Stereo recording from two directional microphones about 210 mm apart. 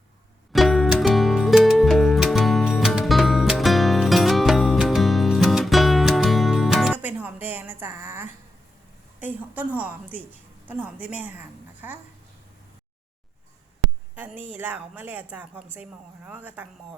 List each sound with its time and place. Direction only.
0.5 s music: centre (ahead or behind)
9.2 s a woman's voice: 10° right (ahead or behind)
14.2 s a woman's voice: 10° right (ahead or behind)